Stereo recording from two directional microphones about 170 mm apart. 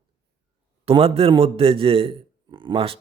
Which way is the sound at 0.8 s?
35° right (ahead or behind).